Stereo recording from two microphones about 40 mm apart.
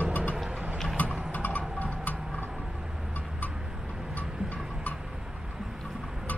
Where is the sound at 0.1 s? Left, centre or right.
Left.